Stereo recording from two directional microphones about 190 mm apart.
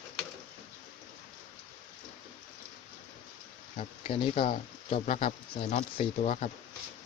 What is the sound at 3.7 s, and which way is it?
Speech, 30° left (ahead or behind).